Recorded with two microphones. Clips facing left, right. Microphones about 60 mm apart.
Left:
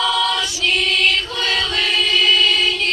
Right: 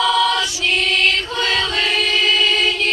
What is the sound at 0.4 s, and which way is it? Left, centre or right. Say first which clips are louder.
Choir: even; centre.